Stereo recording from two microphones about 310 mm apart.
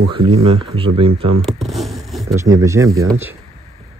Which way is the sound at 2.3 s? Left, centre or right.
Centre.